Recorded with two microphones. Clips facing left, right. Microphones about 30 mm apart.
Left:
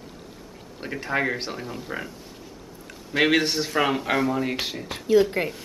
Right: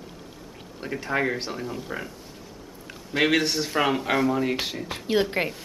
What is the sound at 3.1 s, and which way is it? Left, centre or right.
Speech, centre.